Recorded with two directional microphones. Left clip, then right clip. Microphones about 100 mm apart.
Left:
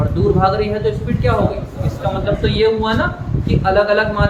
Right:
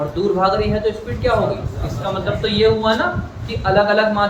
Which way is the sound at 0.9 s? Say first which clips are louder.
Even; 20° left (ahead or behind).